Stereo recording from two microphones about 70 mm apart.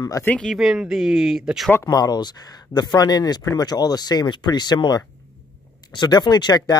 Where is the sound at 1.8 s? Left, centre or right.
Left.